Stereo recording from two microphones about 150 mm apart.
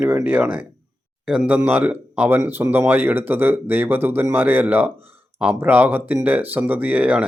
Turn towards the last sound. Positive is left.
turn(degrees=-10)  # may be behind; listen again after turning